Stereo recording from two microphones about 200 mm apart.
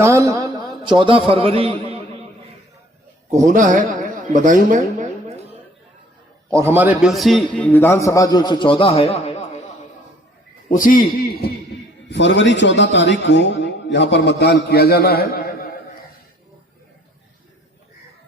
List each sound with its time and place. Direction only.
0.0 s a man's voice: 15° right (ahead or behind)
3.3 s a man's voice: 40° right (ahead or behind)
6.5 s a man's voice: 15° right (ahead or behind); by 9.6 s 35° left (ahead or behind)
10.7 s speech: 45° left (ahead or behind)
12.1 s a man's voice: 60° left (ahead or behind)